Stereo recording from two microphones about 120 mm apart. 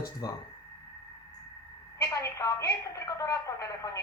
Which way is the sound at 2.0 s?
25° left (ahead or behind).